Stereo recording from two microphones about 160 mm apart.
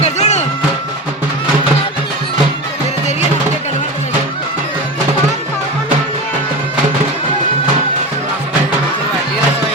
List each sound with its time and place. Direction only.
0.0 s music: 45° left (ahead or behind)